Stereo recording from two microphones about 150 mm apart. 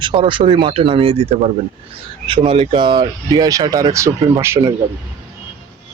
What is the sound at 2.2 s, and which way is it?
Speech, 35° right (ahead or behind).